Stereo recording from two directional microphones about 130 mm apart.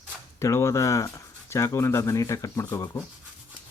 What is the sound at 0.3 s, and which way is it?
Speech, 20° left (ahead or behind).